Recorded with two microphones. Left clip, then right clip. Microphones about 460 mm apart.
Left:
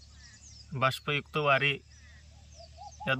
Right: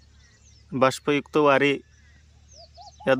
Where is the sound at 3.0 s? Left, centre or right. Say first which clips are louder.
Right 9 dB; centre.